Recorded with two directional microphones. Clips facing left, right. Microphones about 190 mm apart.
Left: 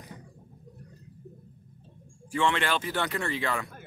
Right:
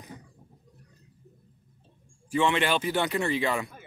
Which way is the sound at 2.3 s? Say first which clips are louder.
Right 2 dB; 15° right (ahead or behind).